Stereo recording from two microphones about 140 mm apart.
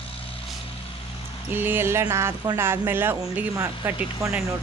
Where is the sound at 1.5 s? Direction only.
15° right (ahead or behind).